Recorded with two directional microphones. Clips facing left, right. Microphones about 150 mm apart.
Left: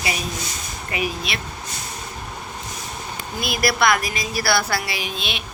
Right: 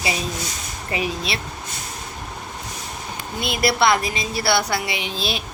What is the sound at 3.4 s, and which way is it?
A woman's voice, 25° right (ahead or behind).